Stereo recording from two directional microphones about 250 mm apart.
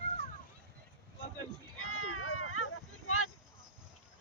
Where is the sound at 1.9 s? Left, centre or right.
Left.